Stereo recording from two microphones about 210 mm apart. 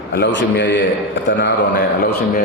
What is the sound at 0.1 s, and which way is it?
A man's voice, 55° left (ahead or behind).